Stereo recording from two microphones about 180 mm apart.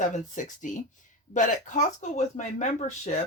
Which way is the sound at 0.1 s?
45° left (ahead or behind).